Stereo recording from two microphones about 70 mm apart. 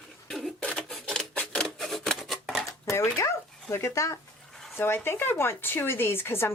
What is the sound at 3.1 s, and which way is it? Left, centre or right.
Speech, left.